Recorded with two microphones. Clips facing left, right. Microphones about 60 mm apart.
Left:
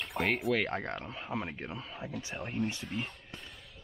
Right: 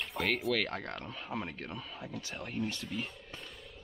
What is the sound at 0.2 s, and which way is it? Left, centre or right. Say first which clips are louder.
Speech: left 2 dB; centre.